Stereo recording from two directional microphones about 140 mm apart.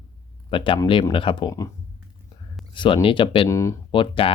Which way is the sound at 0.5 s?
40° left (ahead or behind).